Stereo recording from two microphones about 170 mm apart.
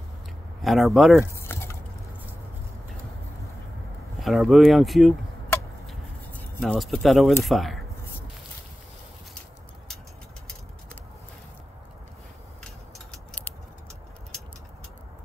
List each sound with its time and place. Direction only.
0.6 s speech: centre (ahead or behind)
1.2 s typing: 15° left (ahead or behind)
4.2 s speech: centre (ahead or behind)
5.9 s a sound: 5° left (ahead or behind)
6.7 s speech: centre (ahead or behind)
13.1 s a sound: 10° left (ahead or behind)